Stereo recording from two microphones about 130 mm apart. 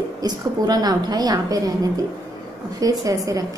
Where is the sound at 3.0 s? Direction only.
25° right (ahead or behind).